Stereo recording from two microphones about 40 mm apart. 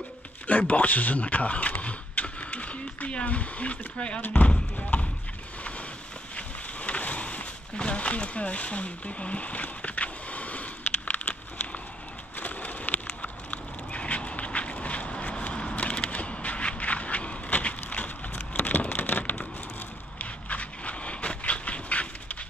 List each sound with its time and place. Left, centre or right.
0.5 s speech: left
4.9 s clip-clop: left
6.3 s a sound: left
20.2 s dog: left